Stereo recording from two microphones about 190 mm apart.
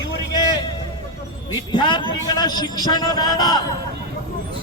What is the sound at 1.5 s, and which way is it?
A man's voice, 25° left (ahead or behind).